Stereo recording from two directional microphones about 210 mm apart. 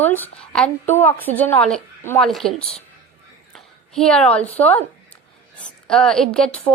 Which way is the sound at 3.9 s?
5° left (ahead or behind).